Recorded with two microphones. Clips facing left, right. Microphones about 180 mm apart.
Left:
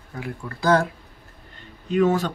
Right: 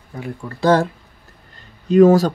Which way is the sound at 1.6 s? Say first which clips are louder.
Right 9 dB; 40° right (ahead or behind).